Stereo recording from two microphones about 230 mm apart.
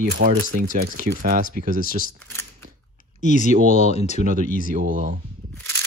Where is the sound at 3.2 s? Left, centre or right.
Left.